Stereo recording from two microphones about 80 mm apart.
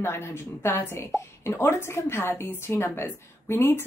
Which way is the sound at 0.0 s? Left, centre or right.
Left.